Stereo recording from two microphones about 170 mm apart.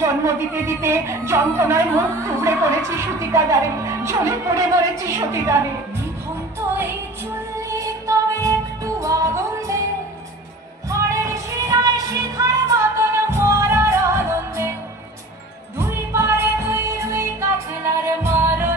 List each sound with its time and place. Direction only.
0.0 s speech: 15° right (ahead or behind)
6.7 s music: 15° right (ahead or behind)
10.9 s music: 20° right (ahead or behind)
15.8 s music: 15° right (ahead or behind)